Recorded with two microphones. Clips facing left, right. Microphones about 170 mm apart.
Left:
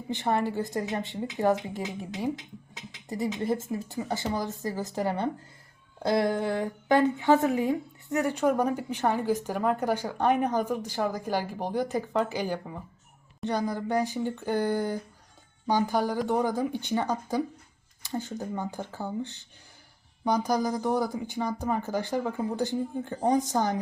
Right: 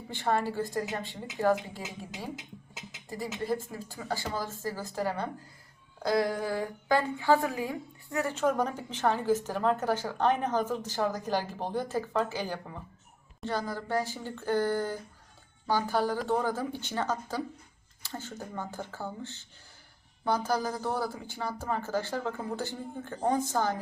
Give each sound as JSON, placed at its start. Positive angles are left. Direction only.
{"t": 0.1, "sound": "speech", "side_deg": 20}
{"t": 3.3, "sound": "speech", "side_deg": 20}